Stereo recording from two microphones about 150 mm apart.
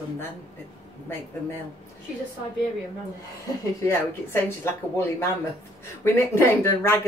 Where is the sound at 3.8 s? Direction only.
15° left (ahead or behind).